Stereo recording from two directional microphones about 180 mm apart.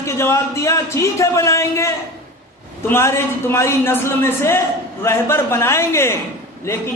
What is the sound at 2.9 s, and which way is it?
A man's voice, 15° left (ahead or behind).